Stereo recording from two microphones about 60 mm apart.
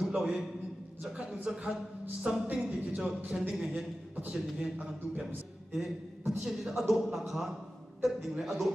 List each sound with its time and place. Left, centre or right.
0.0 s a sound: centre
1.0 s a woman's voice: centre
2.9 s a man's voice: centre